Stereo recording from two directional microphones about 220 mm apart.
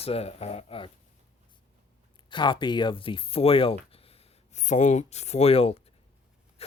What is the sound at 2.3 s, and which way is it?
Speech, 20° left (ahead or behind).